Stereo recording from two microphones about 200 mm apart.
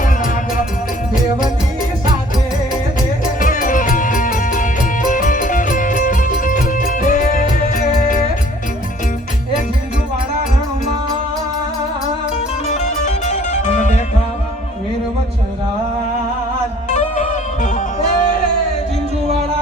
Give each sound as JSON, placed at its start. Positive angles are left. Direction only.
{"t": 3.4, "sound": "music", "side_deg": 40}
{"t": 12.6, "sound": "music", "side_deg": 35}
{"t": 16.9, "sound": "music", "side_deg": 40}